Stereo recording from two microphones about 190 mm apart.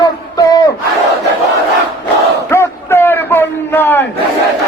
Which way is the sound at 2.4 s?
15° left (ahead or behind).